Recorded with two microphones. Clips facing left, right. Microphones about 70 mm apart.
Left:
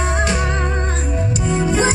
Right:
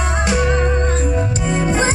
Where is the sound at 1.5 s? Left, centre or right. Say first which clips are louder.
Left 1 dB; right.